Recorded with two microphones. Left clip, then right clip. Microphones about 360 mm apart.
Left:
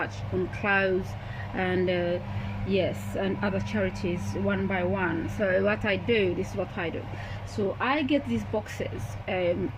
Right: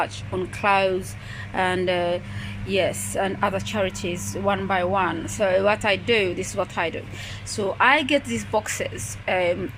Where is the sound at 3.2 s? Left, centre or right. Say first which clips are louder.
Right 6 dB; centre.